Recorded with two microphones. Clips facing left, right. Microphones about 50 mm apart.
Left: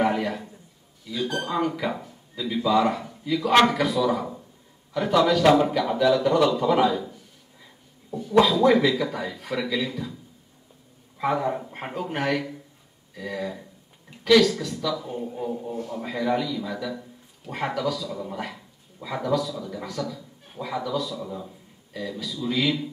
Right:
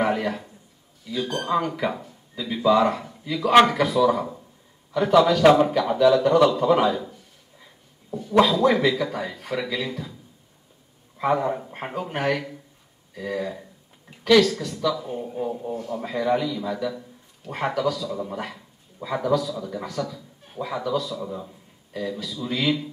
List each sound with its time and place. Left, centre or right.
0.0 s a sound: centre
1.0 s a man's voice: centre
5.4 s speech: centre
5.9 s a man's voice: centre
11.1 s a man's voice: centre